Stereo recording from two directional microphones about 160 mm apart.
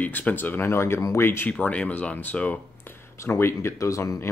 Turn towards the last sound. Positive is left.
turn(degrees=20)  # may be behind; listen again after turning